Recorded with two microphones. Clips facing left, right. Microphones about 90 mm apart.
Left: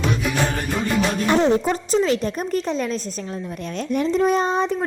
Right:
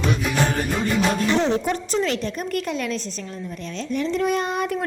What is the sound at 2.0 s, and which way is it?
Speech, 40° left (ahead or behind).